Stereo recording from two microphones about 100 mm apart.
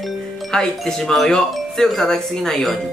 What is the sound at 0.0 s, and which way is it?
Music, 5° left (ahead or behind).